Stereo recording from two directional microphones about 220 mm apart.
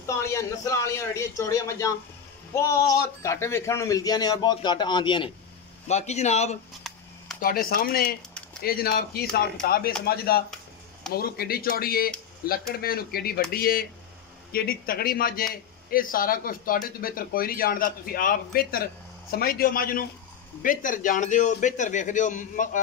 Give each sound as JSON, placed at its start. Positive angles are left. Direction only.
{"t": 0.0, "sound": "a man's voice", "side_deg": 15}
{"t": 6.8, "sound": "camera", "side_deg": 0}
{"t": 7.3, "sound": "speech", "side_deg": 40}